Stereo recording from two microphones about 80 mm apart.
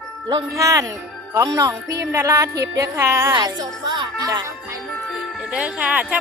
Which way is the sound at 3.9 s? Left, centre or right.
Right.